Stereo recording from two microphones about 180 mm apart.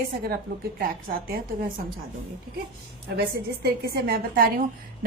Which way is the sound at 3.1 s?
60° right (ahead or behind).